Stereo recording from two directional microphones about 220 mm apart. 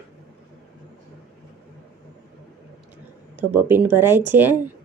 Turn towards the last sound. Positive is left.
turn(degrees=-10)  # may be behind; listen again after turning